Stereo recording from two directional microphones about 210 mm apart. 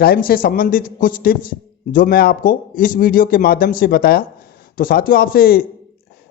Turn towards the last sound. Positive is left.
turn(degrees=45)  # may be behind; listen again after turning